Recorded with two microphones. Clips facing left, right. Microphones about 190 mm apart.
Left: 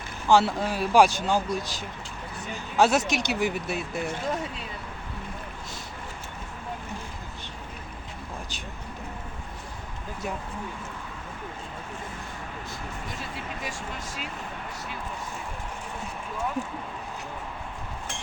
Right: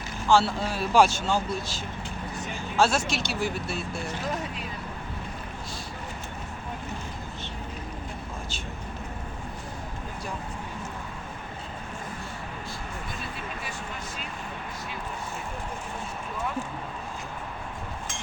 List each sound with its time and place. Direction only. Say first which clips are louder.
0.3 s speech: left 1 dB; 15° left (ahead or behind)